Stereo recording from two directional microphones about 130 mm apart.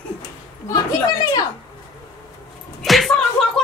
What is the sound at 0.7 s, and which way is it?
Speech, 30° left (ahead or behind).